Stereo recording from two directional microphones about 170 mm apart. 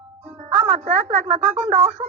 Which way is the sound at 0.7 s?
45° right (ahead or behind).